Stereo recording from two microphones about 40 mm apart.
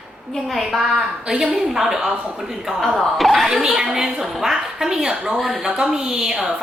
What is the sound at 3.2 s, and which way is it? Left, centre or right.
A woman's voice, centre.